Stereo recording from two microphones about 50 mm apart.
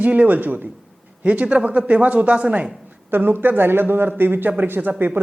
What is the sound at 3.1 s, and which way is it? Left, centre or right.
Speech, right.